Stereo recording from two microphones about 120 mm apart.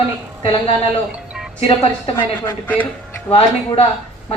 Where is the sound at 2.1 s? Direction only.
15° left (ahead or behind).